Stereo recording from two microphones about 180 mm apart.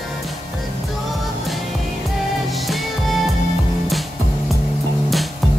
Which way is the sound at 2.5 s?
Centre (ahead or behind).